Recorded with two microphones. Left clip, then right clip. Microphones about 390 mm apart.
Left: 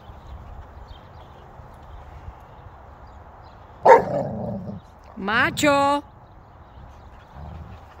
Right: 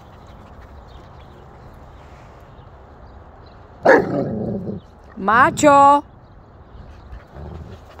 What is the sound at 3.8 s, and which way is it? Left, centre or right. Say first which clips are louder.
Dog: even; centre.